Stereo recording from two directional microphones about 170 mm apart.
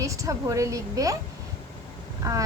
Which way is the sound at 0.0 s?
20° right (ahead or behind).